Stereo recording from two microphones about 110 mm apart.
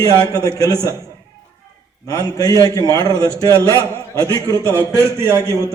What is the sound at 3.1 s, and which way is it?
Speech, 25° right (ahead or behind).